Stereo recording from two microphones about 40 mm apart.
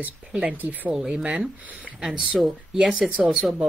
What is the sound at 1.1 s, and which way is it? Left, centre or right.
Speech, right.